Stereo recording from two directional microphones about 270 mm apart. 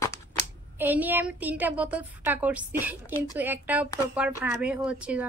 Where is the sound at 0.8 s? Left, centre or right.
Centre.